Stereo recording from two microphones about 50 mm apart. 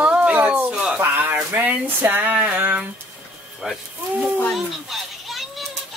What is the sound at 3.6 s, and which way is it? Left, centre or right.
Speech, centre.